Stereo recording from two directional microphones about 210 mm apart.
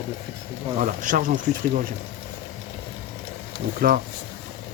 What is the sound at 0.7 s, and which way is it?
Speech, 40° right (ahead or behind).